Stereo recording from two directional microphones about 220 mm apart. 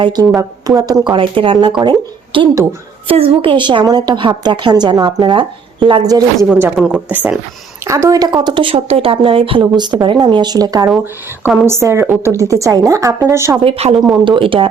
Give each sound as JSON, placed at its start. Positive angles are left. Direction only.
{"t": 0.0, "sound": "a woman's voice", "side_deg": -20}
{"t": 6.5, "sound": "a woman's voice", "side_deg": -5}
{"t": 10.8, "sound": "a woman's voice", "side_deg": -5}
{"t": 13.7, "sound": "a woman's voice", "side_deg": -30}
{"t": 13.9, "sound": "speech", "side_deg": 0}
{"t": 14.3, "sound": "a woman's voice", "side_deg": -25}